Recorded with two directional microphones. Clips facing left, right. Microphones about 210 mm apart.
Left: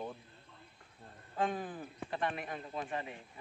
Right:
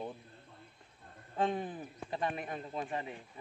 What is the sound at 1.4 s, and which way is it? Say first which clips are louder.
A man's voice: right 2 dB; 25° right (ahead or behind).